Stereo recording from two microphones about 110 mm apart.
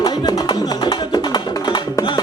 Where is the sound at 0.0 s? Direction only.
40° left (ahead or behind).